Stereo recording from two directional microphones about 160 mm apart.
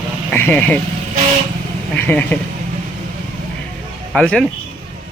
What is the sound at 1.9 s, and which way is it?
Speech, 10° left (ahead or behind).